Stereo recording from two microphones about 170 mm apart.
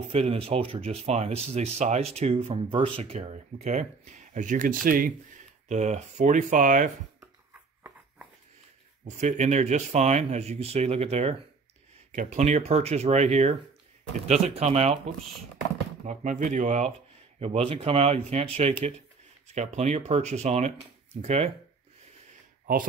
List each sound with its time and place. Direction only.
0.1 s speech: 35° right (ahead or behind); by 5.1 s 55° right (ahead or behind)
5.7 s speech: 40° right (ahead or behind)
9.0 s speech: 45° right (ahead or behind)
16.1 s speech: 45° right (ahead or behind)